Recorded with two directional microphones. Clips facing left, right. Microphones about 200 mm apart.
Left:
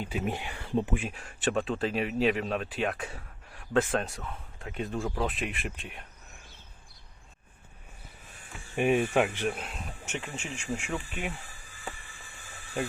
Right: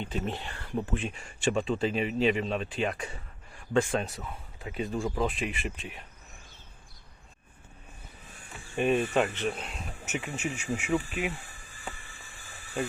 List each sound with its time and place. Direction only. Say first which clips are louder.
0.0 s speech: left 1 dB; 10° left (ahead or behind)
0.9 s speech: right 1 dB; 5° left (ahead or behind)
8.7 s speech: left 1 dB; 10° left (ahead or behind)